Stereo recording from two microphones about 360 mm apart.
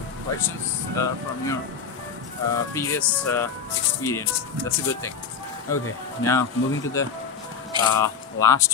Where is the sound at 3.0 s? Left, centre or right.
Centre.